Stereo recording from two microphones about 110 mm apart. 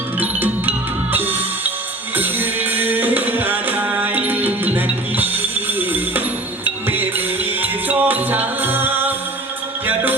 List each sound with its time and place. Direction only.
0.2 s music: 15° right (ahead or behind)